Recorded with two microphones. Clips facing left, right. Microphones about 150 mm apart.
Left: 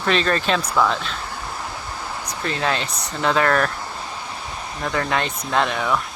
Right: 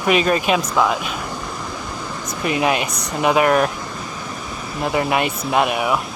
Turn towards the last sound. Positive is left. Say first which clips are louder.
# right 3 dB
turn(degrees=-15)  # may be behind; listen again after turning